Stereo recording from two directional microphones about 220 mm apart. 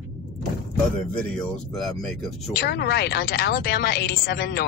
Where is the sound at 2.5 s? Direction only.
45° left (ahead or behind).